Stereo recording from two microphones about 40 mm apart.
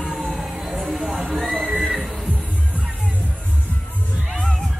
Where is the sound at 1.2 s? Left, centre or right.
Right.